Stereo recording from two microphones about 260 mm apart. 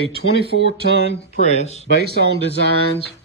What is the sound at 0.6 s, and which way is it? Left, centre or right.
Speech, right.